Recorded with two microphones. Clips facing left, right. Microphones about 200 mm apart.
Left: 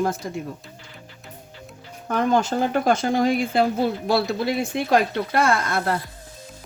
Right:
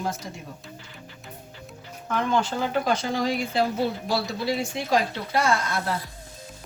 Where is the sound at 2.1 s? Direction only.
40° left (ahead or behind).